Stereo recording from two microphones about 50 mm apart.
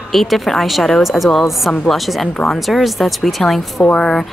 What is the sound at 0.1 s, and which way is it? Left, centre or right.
A woman's voice, centre.